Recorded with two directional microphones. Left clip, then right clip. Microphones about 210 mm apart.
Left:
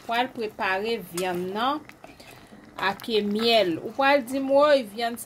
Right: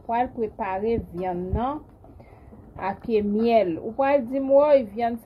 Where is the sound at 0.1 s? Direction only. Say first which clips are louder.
Right 2 dB; 10° left (ahead or behind).